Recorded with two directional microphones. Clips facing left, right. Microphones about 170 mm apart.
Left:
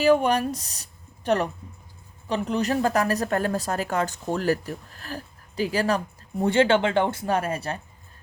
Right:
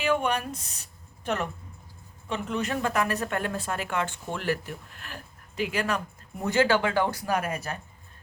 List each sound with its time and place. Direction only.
0.0 s speech: 35° left (ahead or behind)